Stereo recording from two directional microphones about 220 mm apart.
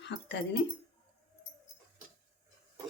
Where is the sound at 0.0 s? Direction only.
50° left (ahead or behind).